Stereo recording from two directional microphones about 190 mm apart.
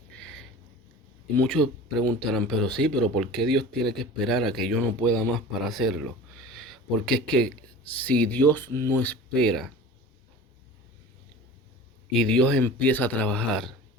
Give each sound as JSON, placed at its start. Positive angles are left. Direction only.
{"t": 1.4, "sound": "speech", "side_deg": 5}
{"t": 6.6, "sound": "speech", "side_deg": 0}
{"t": 12.1, "sound": "speech", "side_deg": 5}